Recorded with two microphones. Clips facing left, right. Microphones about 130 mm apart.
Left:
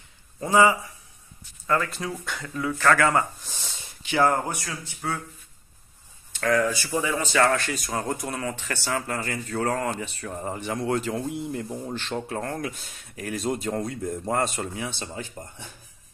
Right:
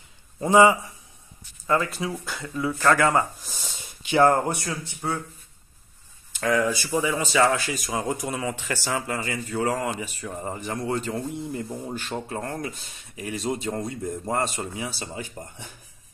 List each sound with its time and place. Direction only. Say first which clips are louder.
0.4 s a man's voice: right 3 dB; 20° right (ahead or behind)
2.0 s speech: right 2 dB; 5° right (ahead or behind)
2.2 s a man's voice: right 1 dB; 30° right (ahead or behind)
6.3 s speech: even; 15° right (ahead or behind)
7.5 s speech: even; 5° right (ahead or behind)
11.7 s speech: left 1 dB; 10° right (ahead or behind)